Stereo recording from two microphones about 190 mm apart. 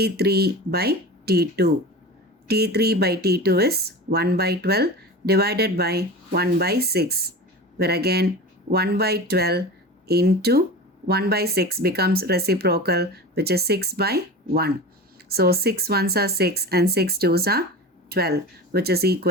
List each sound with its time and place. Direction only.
0.0 s speech: 55° right (ahead or behind)